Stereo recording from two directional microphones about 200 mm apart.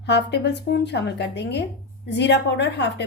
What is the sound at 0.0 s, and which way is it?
A woman's voice, 60° left (ahead or behind).